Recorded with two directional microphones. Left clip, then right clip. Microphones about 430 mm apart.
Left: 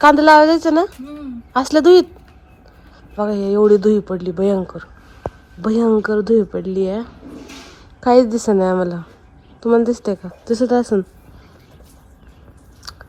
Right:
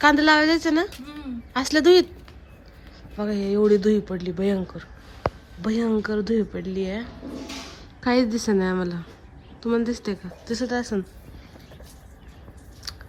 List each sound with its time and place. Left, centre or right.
0.0 s speech: centre
3.2 s speech: centre
5.6 s speech: centre
12.8 s scissors: centre